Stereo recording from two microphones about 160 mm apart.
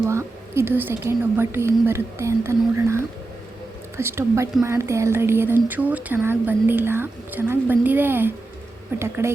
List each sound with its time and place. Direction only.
0.1 s a woman's voice: 15° right (ahead or behind)